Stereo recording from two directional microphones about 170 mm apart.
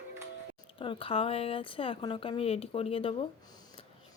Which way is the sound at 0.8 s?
30° left (ahead or behind).